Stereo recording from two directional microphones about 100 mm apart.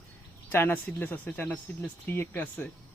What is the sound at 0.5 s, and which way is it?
A man's voice, 20° left (ahead or behind).